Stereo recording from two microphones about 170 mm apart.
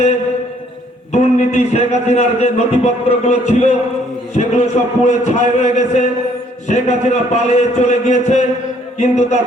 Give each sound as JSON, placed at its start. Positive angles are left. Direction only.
{"t": 1.1, "sound": "a man's voice", "side_deg": 40}